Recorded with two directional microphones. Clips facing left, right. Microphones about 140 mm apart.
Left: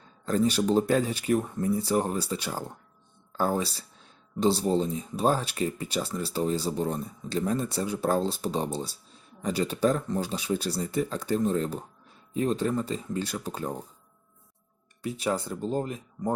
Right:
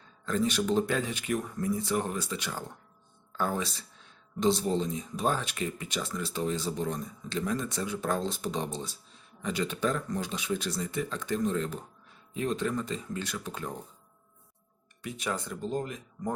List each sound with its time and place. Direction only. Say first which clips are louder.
0.3 s speech: left 4 dB; 35° left (ahead or behind)
15.0 s speech: left 5 dB; 35° left (ahead or behind)